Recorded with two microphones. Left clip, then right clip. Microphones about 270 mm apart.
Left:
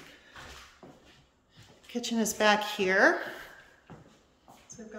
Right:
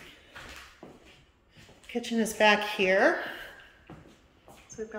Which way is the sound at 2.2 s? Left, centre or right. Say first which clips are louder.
Right 2 dB; left.